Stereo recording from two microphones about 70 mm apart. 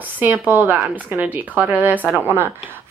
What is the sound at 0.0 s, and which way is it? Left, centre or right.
A woman's voice, right.